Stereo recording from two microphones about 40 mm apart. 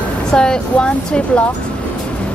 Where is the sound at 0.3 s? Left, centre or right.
Centre.